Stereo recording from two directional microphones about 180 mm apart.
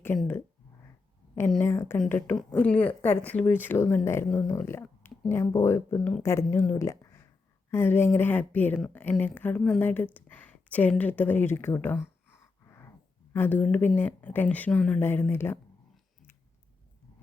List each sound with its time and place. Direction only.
1.6 s a woman's voice: 15° left (ahead or behind)
6.0 s a woman's voice: centre (ahead or behind)
6.2 s a woman's voice: 15° left (ahead or behind)
13.3 s a woman's voice: 10° left (ahead or behind)